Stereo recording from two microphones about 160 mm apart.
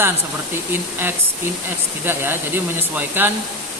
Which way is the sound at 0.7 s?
15° right (ahead or behind).